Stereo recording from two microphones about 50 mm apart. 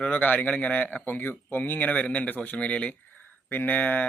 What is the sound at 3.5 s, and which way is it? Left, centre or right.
Speech, left.